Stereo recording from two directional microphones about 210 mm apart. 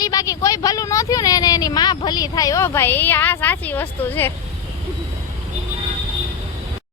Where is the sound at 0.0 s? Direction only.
15° left (ahead or behind).